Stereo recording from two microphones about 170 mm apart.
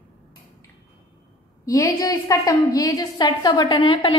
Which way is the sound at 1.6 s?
20° left (ahead or behind).